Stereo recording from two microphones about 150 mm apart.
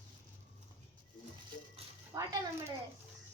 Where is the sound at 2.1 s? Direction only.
25° right (ahead or behind).